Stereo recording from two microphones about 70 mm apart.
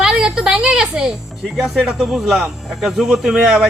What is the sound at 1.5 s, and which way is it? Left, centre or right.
A man's voice, centre.